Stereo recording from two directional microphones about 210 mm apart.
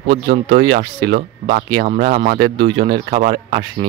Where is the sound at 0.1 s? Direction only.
50° right (ahead or behind).